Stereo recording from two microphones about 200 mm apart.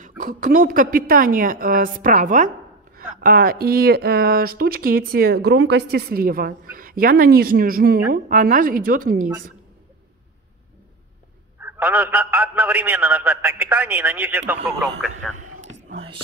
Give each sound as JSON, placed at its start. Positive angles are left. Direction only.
{"t": 0.0, "sound": "speech", "side_deg": -40}
{"t": 11.6, "sound": "a man's voice", "side_deg": -10}
{"t": 15.1, "sound": "speech", "side_deg": -40}